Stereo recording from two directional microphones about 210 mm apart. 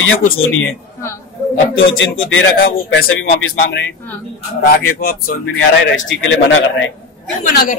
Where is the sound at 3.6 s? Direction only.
55° left (ahead or behind).